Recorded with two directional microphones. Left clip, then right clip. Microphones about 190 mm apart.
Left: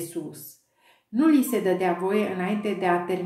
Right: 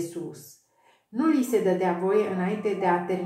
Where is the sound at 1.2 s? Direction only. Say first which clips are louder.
Left 1 dB; 35° left (ahead or behind).